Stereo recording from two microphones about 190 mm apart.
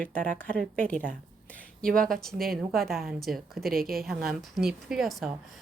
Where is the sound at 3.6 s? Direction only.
50° right (ahead or behind).